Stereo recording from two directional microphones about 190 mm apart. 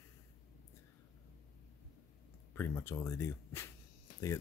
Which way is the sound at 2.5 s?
10° left (ahead or behind).